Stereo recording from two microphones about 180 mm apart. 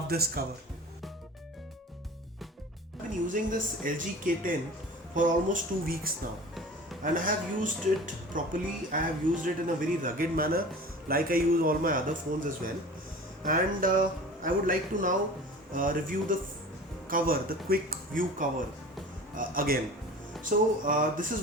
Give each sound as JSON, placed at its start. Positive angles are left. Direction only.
{"t": 0.1, "sound": "speech", "side_deg": -60}
{"t": 3.1, "sound": "speech", "side_deg": -45}